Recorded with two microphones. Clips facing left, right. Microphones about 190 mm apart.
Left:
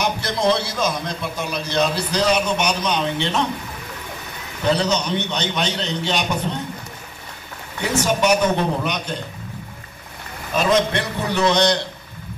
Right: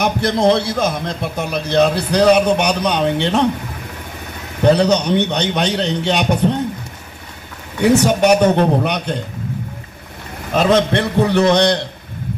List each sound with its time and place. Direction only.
0.0 s a man's voice: 55° right (ahead or behind)
4.6 s a man's voice: 60° right (ahead or behind)
7.8 s a man's voice: 65° right (ahead or behind)
10.5 s a man's voice: 60° right (ahead or behind)